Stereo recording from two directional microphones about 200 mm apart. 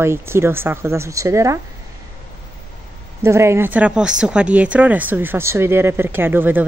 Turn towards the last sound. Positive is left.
turn(degrees=-10)  # may be behind; listen again after turning